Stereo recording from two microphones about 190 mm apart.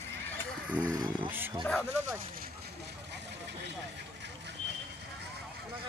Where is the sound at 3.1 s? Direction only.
65° right (ahead or behind).